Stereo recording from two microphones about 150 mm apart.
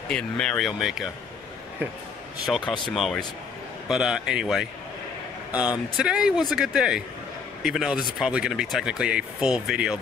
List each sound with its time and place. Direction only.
0.1 s speech: 5° left (ahead or behind)
2.9 s speech: centre (ahead or behind)